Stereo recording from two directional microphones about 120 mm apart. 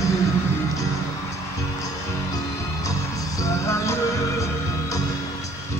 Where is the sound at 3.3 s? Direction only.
25° left (ahead or behind).